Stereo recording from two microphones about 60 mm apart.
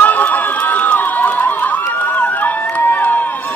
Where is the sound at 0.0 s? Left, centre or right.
Left.